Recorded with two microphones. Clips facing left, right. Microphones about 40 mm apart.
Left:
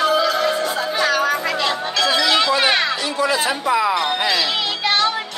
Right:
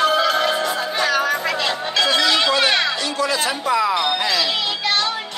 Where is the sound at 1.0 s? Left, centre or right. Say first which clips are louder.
Left 1 dB; centre.